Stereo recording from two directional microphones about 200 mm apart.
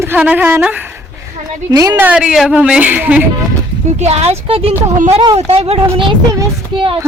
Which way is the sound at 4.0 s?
30° right (ahead or behind).